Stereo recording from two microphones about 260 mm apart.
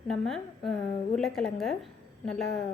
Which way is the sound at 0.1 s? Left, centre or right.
Centre.